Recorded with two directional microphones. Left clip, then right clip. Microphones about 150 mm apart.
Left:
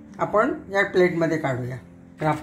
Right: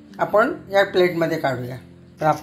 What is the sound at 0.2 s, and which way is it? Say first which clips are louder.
Speech: right 3 dB; 30° right (ahead or behind).